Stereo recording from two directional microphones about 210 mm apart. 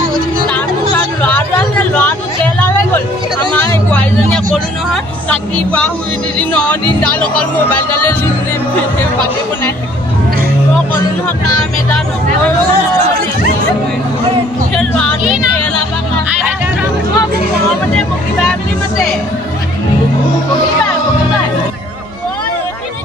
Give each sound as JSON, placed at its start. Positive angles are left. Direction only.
{"t": 0.5, "sound": "a sound", "side_deg": 10}
{"t": 3.5, "sound": "hubbub", "side_deg": 10}
{"t": 5.3, "sound": "speech", "side_deg": 5}
{"t": 14.8, "sound": "speech", "side_deg": 5}